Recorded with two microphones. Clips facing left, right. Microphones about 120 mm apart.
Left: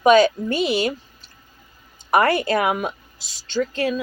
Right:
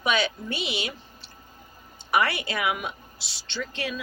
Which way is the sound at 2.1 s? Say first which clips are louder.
Left 8 dB; 45° left (ahead or behind).